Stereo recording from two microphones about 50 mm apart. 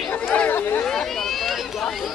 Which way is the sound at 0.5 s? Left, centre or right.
Left.